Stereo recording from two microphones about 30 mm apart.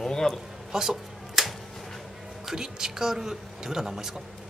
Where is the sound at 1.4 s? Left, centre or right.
Centre.